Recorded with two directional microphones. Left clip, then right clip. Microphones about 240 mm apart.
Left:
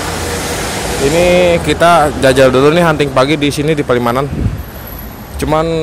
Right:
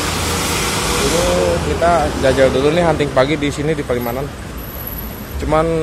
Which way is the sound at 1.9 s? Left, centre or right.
Left.